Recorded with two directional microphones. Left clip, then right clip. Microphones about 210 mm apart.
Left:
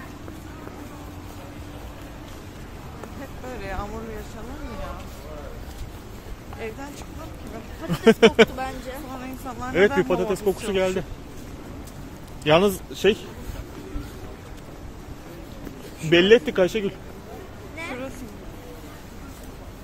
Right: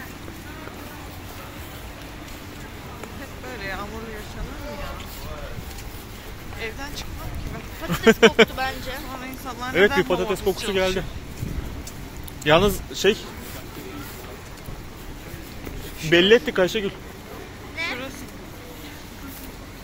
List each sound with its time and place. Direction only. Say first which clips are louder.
3.5 s a sound: right 2 dB; 40° left (ahead or behind)
7.9 s speech: right 1 dB; 15° left (ahead or behind)
9.7 s speech: right 1 dB; 25° left (ahead or behind)
12.4 s speech: right 1 dB; 15° left (ahead or behind)
16.1 s speech: even; 25° left (ahead or behind)
17.7 s a sound: right 5 dB; 50° left (ahead or behind)